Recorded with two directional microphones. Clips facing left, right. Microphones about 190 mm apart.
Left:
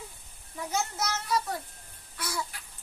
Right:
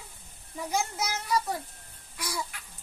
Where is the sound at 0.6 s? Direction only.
10° right (ahead or behind).